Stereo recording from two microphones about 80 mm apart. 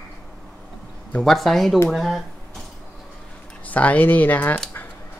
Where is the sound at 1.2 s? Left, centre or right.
Centre.